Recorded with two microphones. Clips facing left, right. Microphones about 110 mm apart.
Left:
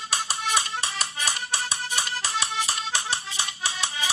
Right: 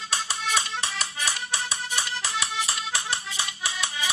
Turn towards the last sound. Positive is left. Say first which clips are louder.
# left 1 dB
turn(degrees=30)  # may be behind; listen again after turning